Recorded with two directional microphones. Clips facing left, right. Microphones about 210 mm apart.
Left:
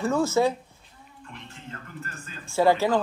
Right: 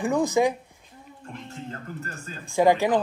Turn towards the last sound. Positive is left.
turn(degrees=-15)  # may be behind; listen again after turning